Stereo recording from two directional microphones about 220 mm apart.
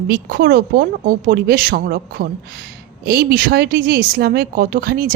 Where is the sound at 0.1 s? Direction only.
45° right (ahead or behind).